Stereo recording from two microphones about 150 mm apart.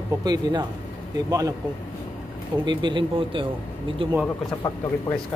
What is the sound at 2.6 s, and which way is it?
Speech, 30° right (ahead or behind).